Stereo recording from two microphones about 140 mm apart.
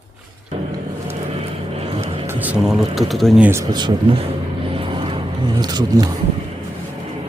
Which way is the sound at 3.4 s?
20° right (ahead or behind).